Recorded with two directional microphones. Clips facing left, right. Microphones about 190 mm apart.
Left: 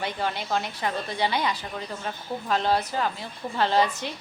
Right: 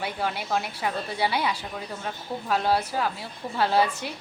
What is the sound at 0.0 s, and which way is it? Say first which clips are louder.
Speech: even; 10° right (ahead or behind).